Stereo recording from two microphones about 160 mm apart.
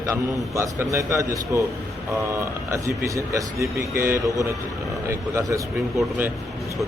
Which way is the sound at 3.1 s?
20° right (ahead or behind).